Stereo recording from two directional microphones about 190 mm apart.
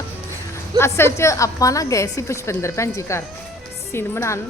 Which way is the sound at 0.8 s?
15° left (ahead or behind).